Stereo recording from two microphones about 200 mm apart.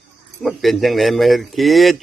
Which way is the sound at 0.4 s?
Centre (ahead or behind).